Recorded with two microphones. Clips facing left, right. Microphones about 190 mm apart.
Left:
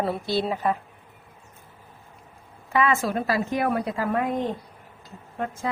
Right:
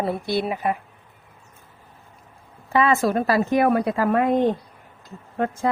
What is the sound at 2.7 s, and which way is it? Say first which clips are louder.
Speech: right 4 dB; 35° right (ahead or behind).